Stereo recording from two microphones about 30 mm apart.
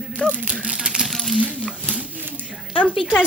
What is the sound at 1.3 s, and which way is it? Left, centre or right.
Coin, right.